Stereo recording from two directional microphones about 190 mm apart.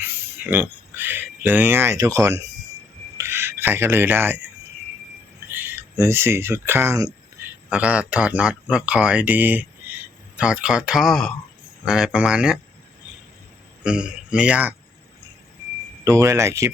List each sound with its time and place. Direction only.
0.5 s speech: 10° right (ahead or behind)
3.2 s a sound: 15° right (ahead or behind)
5.5 s speech: 10° right (ahead or behind)
13.8 s speech: 5° right (ahead or behind)
16.0 s speech: 15° right (ahead or behind)